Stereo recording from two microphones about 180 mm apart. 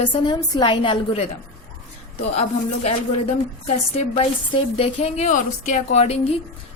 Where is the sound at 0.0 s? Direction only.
25° left (ahead or behind).